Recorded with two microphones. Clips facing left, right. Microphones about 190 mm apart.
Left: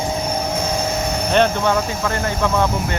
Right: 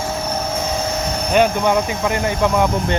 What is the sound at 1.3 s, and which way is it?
Speech, 10° right (ahead or behind).